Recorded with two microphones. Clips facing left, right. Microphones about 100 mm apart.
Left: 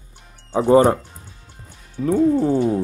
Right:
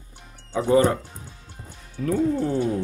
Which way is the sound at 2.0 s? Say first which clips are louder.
Left 5 dB; 10° left (ahead or behind).